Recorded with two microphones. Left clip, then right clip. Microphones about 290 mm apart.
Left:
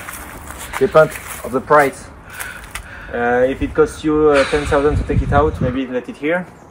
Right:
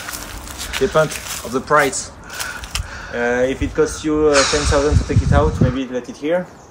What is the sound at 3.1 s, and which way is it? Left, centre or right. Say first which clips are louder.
Speech: left 2 dB; left.